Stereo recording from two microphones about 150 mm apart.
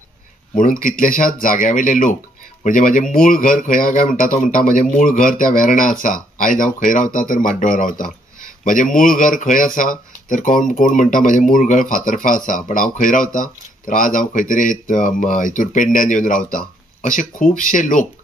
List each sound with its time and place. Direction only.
0.6 s speech: 65° left (ahead or behind)